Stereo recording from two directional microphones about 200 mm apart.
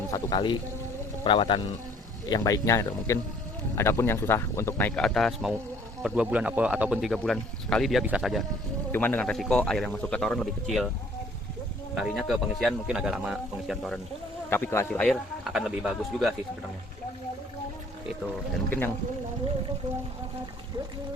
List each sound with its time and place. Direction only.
0.1 s speech: 20° left (ahead or behind); by 10.9 s centre (ahead or behind)
11.9 s speech: centre (ahead or behind)
14.5 s speech: 10° left (ahead or behind)